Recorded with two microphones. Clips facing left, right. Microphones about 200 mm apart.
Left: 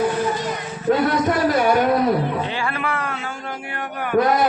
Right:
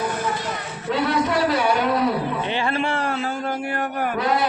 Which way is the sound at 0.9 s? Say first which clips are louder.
Left 4 dB; 45° left (ahead or behind).